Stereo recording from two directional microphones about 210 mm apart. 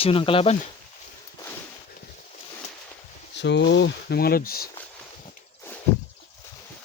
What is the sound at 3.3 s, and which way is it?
Speech, 55° left (ahead or behind).